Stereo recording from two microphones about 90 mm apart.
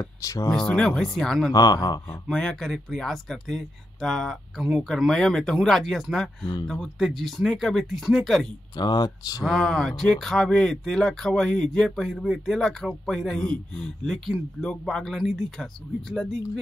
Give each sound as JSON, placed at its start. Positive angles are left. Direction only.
{"t": 0.0, "sound": "speech", "side_deg": 35}
{"t": 0.5, "sound": "speech", "side_deg": 10}
{"t": 1.5, "sound": "speech", "side_deg": 45}
{"t": 2.2, "sound": "speech", "side_deg": 10}
{"t": 8.7, "sound": "speech", "side_deg": 50}
{"t": 9.4, "sound": "speech", "side_deg": 5}